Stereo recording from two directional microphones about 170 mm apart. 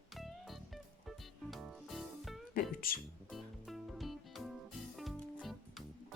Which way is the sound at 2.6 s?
60° left (ahead or behind).